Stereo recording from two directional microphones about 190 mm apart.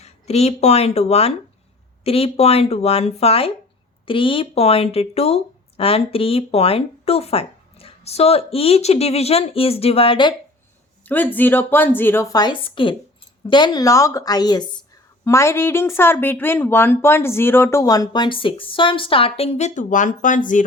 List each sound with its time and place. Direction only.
0.0 s a woman's voice: 35° left (ahead or behind)
11.0 s a woman's voice: 10° left (ahead or behind); by 20.7 s 45° left (ahead or behind)